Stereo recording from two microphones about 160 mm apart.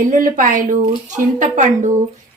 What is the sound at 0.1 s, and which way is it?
A woman's voice, 55° right (ahead or behind).